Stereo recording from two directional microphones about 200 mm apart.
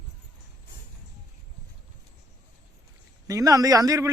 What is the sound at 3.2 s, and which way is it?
Speech, 15° right (ahead or behind).